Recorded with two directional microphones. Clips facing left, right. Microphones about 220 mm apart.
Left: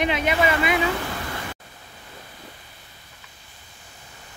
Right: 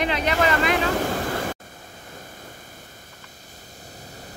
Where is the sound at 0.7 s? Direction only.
45° right (ahead or behind).